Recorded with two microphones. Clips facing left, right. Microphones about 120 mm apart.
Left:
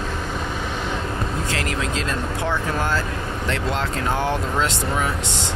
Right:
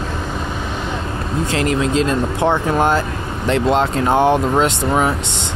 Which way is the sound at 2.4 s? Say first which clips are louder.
Right 8 dB; 55° right (ahead or behind).